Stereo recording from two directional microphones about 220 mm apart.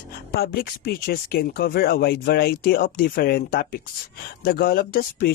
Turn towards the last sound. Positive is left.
turn(degrees=45)  # may be behind; listen again after turning